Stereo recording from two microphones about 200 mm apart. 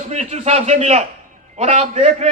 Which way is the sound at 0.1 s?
35° right (ahead or behind).